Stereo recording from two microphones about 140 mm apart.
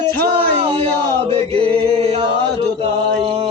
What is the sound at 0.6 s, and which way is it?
Chant, 45° right (ahead or behind).